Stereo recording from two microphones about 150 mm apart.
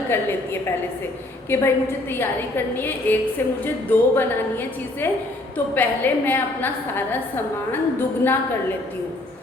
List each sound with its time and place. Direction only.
0.1 s a woman's voice: 15° left (ahead or behind)